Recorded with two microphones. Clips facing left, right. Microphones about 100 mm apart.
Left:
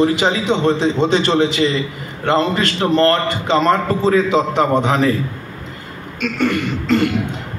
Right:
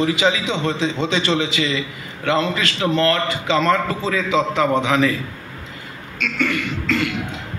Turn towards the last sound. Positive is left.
turn(degrees=45)  # may be behind; listen again after turning